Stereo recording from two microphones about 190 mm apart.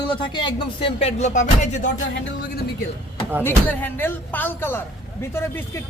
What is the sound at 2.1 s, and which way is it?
Speech, 60° left (ahead or behind).